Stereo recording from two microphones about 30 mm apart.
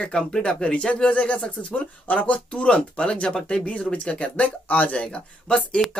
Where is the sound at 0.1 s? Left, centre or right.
Left.